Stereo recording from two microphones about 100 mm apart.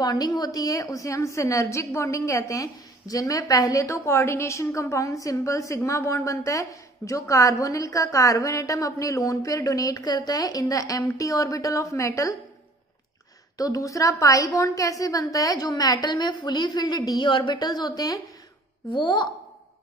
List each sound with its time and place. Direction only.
0.0 s a woman's voice: 40° left (ahead or behind)
13.6 s a woman's voice: 35° left (ahead or behind)
18.9 s a woman's voice: 50° left (ahead or behind)